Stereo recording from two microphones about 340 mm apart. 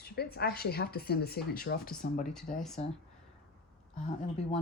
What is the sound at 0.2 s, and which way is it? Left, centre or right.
Speech, left.